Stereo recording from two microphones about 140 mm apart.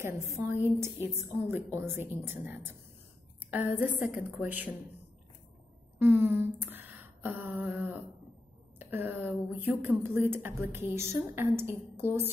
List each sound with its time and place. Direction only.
0.0 s a woman's voice: 20° right (ahead or behind)
3.8 s a woman's voice: 10° right (ahead or behind)
5.9 s a sound: 15° right (ahead or behind)
8.7 s a woman's voice: 15° right (ahead or behind)